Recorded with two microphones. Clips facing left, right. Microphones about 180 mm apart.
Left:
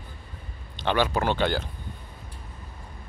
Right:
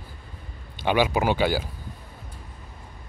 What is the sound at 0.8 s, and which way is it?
Speech, 10° right (ahead or behind).